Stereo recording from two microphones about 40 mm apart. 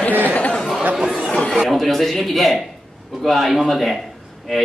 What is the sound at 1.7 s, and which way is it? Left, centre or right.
A man's voice, centre.